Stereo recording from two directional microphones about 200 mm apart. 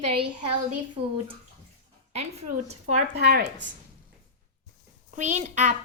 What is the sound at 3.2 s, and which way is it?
Speech, 50° right (ahead or behind).